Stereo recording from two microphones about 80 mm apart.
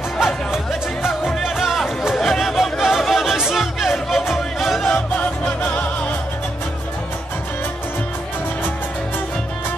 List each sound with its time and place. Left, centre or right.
0.2 s music: centre
4.8 s music: centre